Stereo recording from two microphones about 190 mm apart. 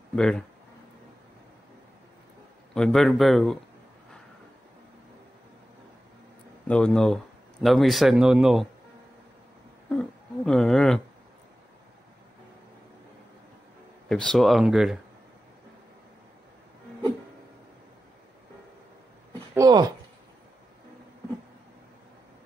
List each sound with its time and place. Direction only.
0.1 s speech: 5° left (ahead or behind)
2.7 s speech: 5° left (ahead or behind)
6.7 s speech: 5° left (ahead or behind)
9.9 s speech: 5° left (ahead or behind)
14.0 s speech: 5° left (ahead or behind)
19.5 s speech: 20° right (ahead or behind)